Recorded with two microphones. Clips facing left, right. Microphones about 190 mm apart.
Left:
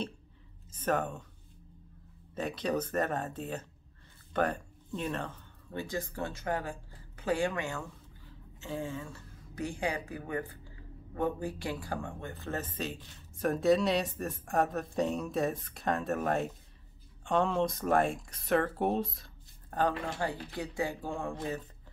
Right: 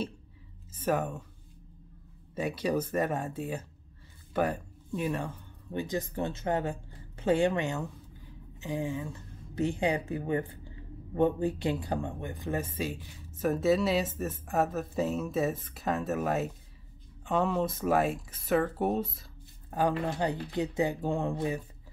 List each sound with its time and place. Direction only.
0.7 s speech: 10° right (ahead or behind)
2.3 s speech: 10° right (ahead or behind)
20.1 s speech: 20° right (ahead or behind)